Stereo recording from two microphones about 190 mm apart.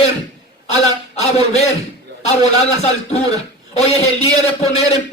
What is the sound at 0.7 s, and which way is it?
A man's voice, 35° left (ahead or behind).